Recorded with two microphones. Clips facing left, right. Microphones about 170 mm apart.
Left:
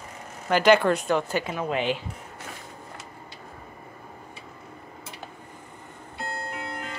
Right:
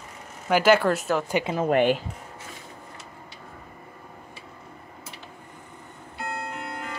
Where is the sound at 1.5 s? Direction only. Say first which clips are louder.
Right 8 dB; 50° right (ahead or behind).